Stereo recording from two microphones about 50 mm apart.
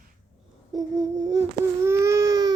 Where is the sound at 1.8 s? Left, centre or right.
Right.